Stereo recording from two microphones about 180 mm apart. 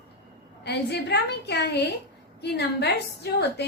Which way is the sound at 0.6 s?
65° left (ahead or behind).